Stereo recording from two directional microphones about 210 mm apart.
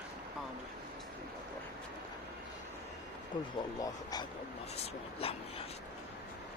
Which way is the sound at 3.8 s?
20° left (ahead or behind).